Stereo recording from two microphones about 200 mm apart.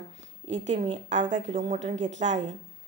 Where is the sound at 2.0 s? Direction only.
65° right (ahead or behind).